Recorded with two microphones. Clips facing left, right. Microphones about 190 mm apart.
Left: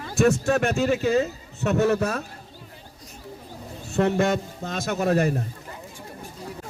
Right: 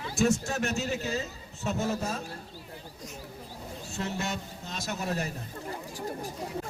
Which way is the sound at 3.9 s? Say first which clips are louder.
Left 13 dB; 60° left (ahead or behind).